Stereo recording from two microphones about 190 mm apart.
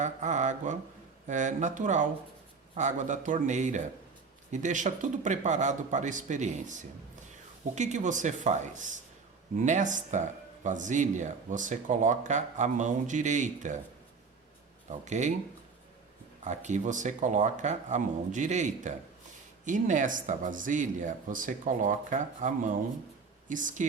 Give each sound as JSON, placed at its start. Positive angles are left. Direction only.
{"t": 0.0, "sound": "speech", "side_deg": -40}
{"t": 14.8, "sound": "speech", "side_deg": -40}
{"t": 16.4, "sound": "speech", "side_deg": -40}